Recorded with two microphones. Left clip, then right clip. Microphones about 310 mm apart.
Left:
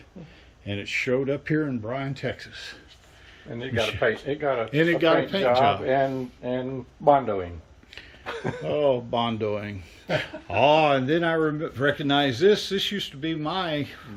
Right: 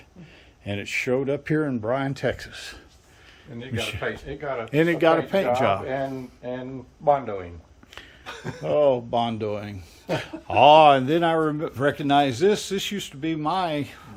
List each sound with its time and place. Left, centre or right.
0.6 s speech: centre
3.8 s speech: centre
4.0 s speech: left
4.7 s speech: centre
7.0 s speech: left
8.2 s a sound: centre
8.6 s speech: centre